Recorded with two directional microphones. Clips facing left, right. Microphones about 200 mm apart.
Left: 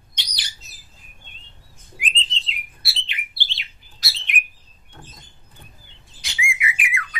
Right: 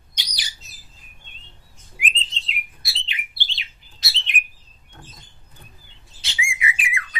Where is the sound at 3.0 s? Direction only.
20° right (ahead or behind).